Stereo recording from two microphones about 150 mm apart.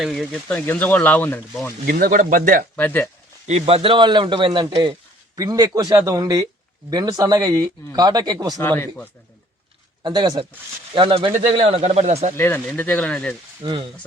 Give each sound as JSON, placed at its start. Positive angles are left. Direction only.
{"t": 0.0, "sound": "speech", "side_deg": 0}
{"t": 1.9, "sound": "speech", "side_deg": -70}
{"t": 2.7, "sound": "speech", "side_deg": 10}
{"t": 3.4, "sound": "speech", "side_deg": -45}
{"t": 8.5, "sound": "speech", "side_deg": 15}
{"t": 10.0, "sound": "speech", "side_deg": -30}
{"t": 11.3, "sound": "a man's voice", "side_deg": -50}
{"t": 12.4, "sound": "speech", "side_deg": 15}
{"t": 13.6, "sound": "speech", "side_deg": -30}